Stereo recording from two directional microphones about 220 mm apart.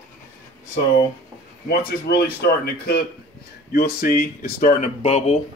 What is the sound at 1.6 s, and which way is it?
Speech, 45° left (ahead or behind).